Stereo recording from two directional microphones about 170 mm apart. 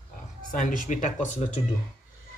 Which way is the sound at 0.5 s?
50° left (ahead or behind).